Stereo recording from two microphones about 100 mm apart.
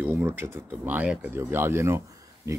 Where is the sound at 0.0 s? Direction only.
25° right (ahead or behind).